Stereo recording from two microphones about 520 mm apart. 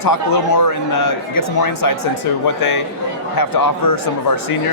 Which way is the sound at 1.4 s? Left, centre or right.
Left.